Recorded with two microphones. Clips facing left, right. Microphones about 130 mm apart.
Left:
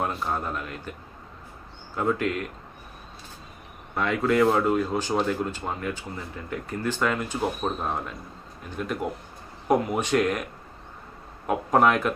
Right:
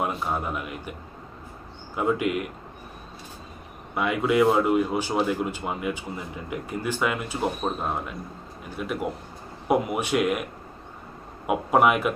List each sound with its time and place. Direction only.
0.0 s speech: 5° right (ahead or behind)
2.0 s speech: 10° right (ahead or behind)
3.9 s speech: 10° right (ahead or behind)
11.4 s speech: 10° right (ahead or behind)